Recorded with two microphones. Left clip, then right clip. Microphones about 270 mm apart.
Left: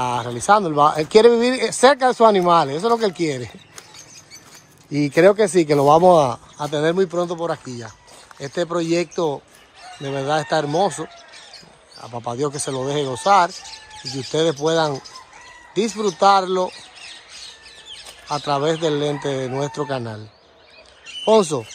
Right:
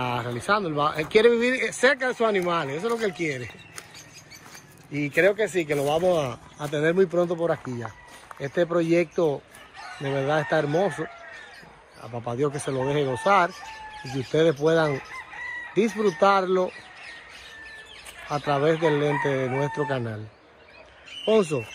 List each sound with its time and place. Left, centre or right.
0.0 s speech: centre
4.9 s speech: left
5.8 s speech: left
6.0 s speech: centre
16.1 s speech: centre
18.3 s speech: centre
21.3 s speech: centre